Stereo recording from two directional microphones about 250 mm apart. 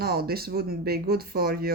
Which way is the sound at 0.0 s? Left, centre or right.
Right.